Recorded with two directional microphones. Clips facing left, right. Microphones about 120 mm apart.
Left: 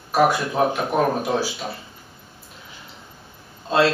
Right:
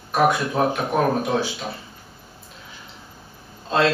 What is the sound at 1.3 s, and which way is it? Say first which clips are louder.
Speech: even; 15° left (ahead or behind).